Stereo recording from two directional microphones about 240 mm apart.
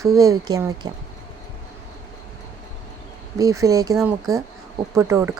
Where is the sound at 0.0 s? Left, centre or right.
Centre.